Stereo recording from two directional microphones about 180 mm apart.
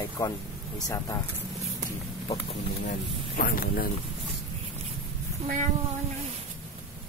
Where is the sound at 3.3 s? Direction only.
55° left (ahead or behind).